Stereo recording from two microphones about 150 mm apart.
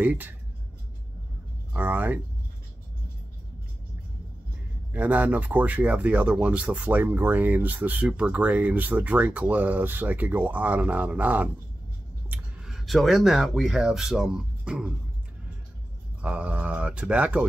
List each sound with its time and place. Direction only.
0.0 s speech: 10° right (ahead or behind)
1.7 s speech: 10° right (ahead or behind)
4.9 s speech: 10° right (ahead or behind)
16.2 s speech: 10° right (ahead or behind)